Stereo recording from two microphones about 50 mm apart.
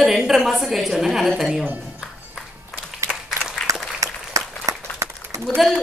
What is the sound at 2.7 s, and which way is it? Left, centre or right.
Clapping, centre.